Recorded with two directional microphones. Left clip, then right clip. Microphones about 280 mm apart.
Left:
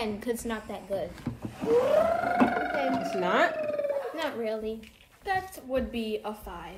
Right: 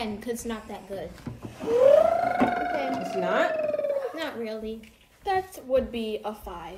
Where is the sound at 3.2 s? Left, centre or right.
Left.